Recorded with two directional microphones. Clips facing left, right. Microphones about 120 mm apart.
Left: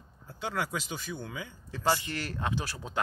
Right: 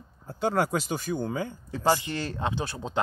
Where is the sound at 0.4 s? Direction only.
45° right (ahead or behind).